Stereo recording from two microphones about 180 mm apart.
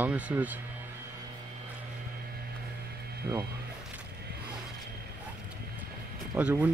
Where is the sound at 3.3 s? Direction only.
15° right (ahead or behind).